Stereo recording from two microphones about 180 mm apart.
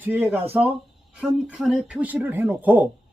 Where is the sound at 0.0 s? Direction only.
10° right (ahead or behind).